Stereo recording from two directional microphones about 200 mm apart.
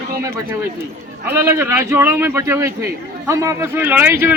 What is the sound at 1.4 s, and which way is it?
A man's voice, 15° right (ahead or behind).